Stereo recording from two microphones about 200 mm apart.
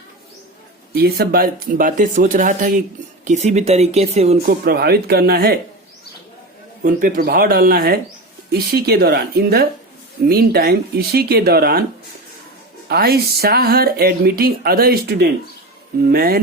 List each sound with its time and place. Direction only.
0.9 s speech: 50° right (ahead or behind); by 4.4 s 30° right (ahead or behind)
4.4 s speech: 50° right (ahead or behind)
6.8 s speech: 45° right (ahead or behind)
12.9 s speech: 50° right (ahead or behind)